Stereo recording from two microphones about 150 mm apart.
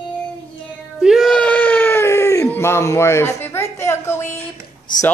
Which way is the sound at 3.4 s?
15° left (ahead or behind).